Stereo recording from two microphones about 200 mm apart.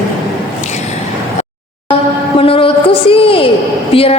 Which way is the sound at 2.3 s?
25° left (ahead or behind).